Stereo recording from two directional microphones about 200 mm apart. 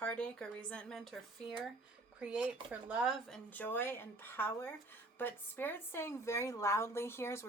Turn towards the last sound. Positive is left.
turn(degrees=15)  # may be behind; listen again after turning